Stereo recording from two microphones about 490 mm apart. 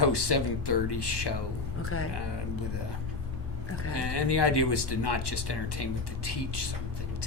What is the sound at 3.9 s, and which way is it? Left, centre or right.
Speech, left.